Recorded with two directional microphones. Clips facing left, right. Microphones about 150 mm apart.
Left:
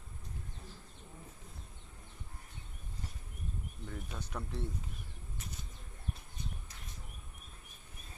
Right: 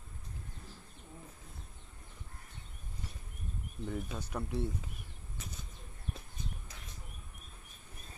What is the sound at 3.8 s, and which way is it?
Speech, 10° right (ahead or behind).